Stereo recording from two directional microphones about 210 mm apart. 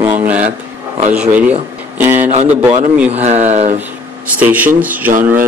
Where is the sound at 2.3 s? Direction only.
30° right (ahead or behind).